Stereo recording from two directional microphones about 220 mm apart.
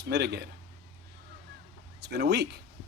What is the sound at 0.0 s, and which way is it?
Speech, 50° right (ahead or behind).